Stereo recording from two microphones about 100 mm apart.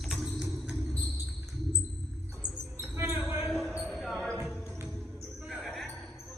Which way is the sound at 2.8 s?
20° right (ahead or behind).